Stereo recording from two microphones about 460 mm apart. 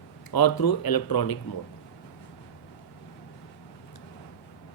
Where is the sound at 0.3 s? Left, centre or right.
Left.